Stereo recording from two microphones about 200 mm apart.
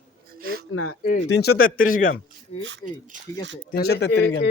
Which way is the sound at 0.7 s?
90° left.